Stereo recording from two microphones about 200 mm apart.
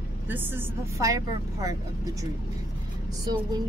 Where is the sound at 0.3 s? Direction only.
10° right (ahead or behind).